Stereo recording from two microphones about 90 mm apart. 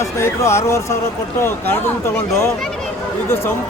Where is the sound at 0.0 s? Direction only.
30° left (ahead or behind).